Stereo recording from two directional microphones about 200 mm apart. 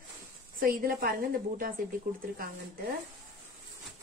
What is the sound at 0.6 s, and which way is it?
Speech, 45° right (ahead or behind).